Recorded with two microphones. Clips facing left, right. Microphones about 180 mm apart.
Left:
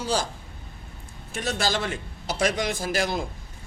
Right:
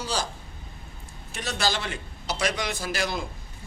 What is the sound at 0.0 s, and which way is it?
Speech, 50° left (ahead or behind).